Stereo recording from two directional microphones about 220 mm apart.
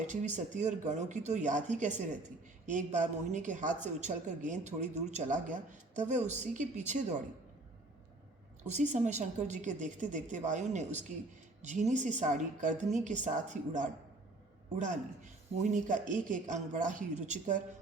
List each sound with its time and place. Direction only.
0.1 s a woman's voice: 35° right (ahead or behind)
8.9 s a woman's voice: 30° right (ahead or behind)
15.5 s a woman's voice: 35° right (ahead or behind)